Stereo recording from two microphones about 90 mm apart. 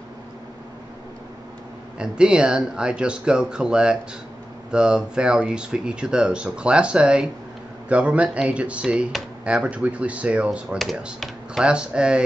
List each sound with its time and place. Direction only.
2.0 s speech: 10° right (ahead or behind)